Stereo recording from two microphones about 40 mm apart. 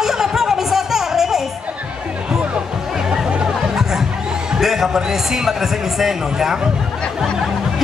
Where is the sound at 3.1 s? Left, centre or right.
Right.